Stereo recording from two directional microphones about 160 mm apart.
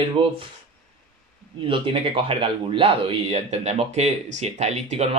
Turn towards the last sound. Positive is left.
turn(degrees=-40)  # may be behind; listen again after turning